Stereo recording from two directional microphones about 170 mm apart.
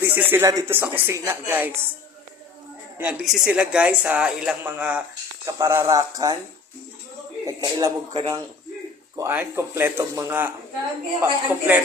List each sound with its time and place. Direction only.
0.0 s speech: 10° right (ahead or behind)
3.0 s speech: 5° right (ahead or behind)
5.5 s a man's voice: 20° right (ahead or behind)
7.4 s a man's voice: 20° right (ahead or behind)